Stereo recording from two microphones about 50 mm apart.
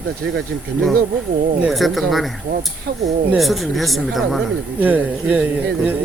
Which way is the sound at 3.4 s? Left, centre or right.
Centre.